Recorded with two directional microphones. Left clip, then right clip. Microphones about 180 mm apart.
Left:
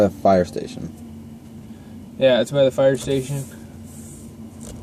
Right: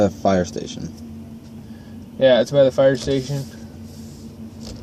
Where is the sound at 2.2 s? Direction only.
30° left (ahead or behind).